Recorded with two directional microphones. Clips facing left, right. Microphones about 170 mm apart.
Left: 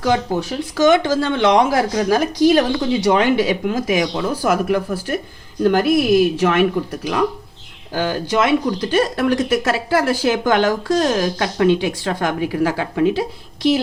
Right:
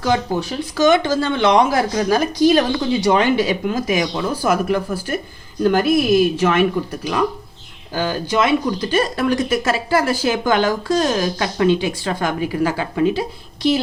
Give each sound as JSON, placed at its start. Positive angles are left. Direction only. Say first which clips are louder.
{"t": 0.8, "sound": "a woman's voice", "louder": "left 1 dB", "side_deg": 85}
{"t": 2.5, "sound": "speech", "louder": "left 1 dB", "side_deg": 70}